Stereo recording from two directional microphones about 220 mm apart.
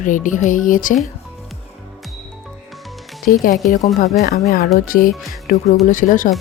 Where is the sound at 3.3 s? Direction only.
40° left (ahead or behind).